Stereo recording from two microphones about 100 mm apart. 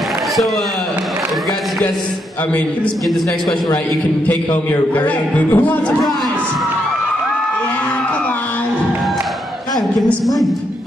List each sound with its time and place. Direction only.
4.9 s speech: 15° left (ahead or behind)